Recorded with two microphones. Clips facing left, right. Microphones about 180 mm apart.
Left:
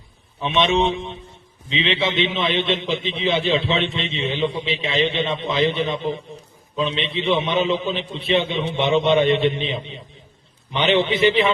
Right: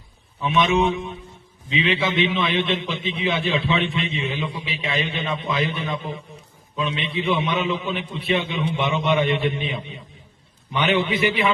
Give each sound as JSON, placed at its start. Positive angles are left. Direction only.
{"t": 0.4, "sound": "a man's voice", "side_deg": 25}